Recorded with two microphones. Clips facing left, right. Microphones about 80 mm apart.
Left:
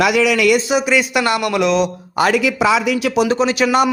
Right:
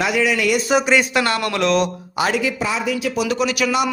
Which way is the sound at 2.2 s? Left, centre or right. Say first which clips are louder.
Left 5 dB; left.